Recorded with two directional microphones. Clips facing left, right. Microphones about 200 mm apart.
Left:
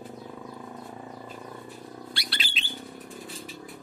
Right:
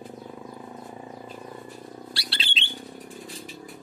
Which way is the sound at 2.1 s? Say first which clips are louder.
Even; 30° right (ahead or behind).